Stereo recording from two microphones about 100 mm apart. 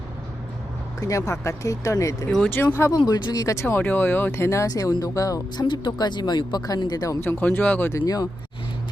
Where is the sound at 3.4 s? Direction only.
30° left (ahead or behind).